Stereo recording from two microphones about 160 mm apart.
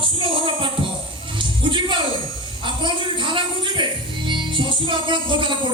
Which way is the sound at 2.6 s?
30° right (ahead or behind).